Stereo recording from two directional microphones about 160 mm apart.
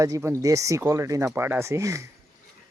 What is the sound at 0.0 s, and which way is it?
Speech, 20° right (ahead or behind).